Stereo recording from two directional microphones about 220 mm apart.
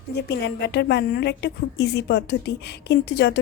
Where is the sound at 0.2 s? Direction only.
50° left (ahead or behind).